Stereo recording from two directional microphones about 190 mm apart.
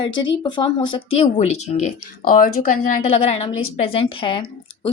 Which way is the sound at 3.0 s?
30° left (ahead or behind).